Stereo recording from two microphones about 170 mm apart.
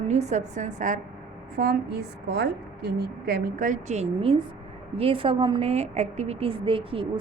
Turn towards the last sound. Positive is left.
turn(degrees=-30)  # may be behind; listen again after turning